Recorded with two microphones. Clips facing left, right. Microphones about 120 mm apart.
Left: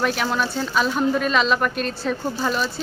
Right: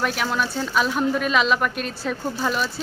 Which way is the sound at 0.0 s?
5° right (ahead or behind).